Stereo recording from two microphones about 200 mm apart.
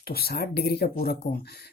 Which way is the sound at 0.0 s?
50° left (ahead or behind).